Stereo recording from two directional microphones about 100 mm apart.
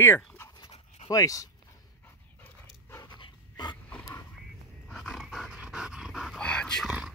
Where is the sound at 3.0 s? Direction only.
45° left (ahead or behind).